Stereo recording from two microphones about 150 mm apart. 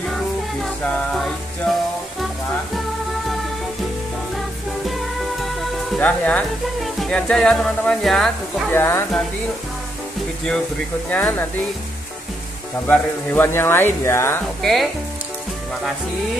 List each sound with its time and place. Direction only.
0.8 s music: 5° left (ahead or behind)
4.8 s music: centre (ahead or behind)
5.9 s speech: 10° left (ahead or behind)
8.7 s speech: 15° left (ahead or behind)
11.1 s speech: 10° left (ahead or behind)
12.8 s speech: 10° left (ahead or behind)
14.6 s speech: centre (ahead or behind)